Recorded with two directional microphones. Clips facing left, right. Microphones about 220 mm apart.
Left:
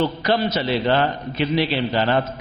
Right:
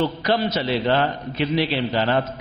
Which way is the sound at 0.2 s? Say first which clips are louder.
Left 1 dB; 10° left (ahead or behind).